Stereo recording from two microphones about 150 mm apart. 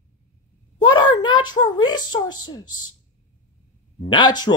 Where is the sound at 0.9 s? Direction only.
30° left (ahead or behind).